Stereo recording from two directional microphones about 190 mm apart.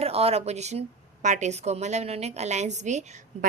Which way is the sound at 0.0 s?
30° right (ahead or behind).